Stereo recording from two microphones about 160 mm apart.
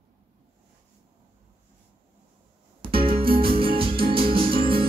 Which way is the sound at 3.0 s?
35° right (ahead or behind).